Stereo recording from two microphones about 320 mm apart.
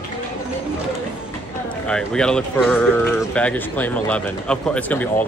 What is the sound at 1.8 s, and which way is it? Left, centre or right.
Speech, centre.